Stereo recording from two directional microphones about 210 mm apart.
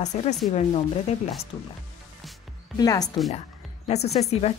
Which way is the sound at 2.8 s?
15° left (ahead or behind).